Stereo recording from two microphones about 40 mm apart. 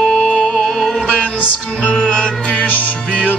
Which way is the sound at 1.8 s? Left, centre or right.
Left.